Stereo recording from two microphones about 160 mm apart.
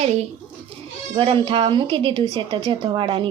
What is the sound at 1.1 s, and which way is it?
A woman's voice, 35° right (ahead or behind).